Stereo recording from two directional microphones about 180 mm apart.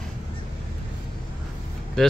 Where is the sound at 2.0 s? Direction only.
Centre (ahead or behind).